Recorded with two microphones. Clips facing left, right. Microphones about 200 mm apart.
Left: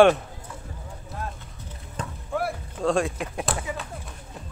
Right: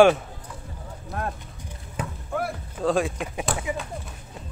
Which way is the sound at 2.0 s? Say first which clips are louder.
Right 2 dB; 10° right (ahead or behind).